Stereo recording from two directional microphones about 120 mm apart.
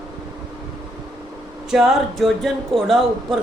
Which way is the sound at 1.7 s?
Centre (ahead or behind).